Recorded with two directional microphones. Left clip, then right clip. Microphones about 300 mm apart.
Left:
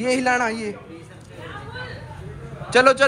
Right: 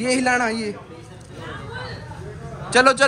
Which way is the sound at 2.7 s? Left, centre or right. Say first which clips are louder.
Even; centre.